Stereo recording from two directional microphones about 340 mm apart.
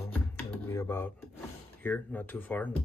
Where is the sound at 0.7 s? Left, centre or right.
Centre.